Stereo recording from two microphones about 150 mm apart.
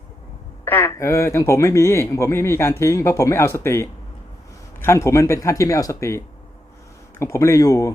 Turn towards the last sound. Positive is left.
turn(degrees=20)  # may be behind; listen again after turning